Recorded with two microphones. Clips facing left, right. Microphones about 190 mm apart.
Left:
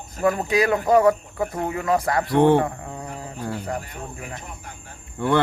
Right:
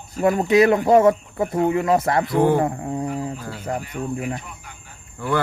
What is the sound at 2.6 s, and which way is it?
Insect, 30° right (ahead or behind).